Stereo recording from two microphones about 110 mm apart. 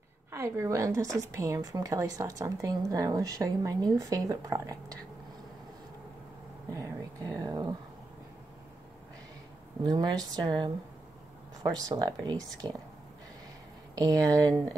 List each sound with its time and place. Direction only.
0.3 s a woman's voice: 25° right (ahead or behind)
7.4 s a sound: 35° right (ahead or behind)
9.8 s a woman's voice: 40° right (ahead or behind)
13.9 s a woman's voice: 35° right (ahead or behind)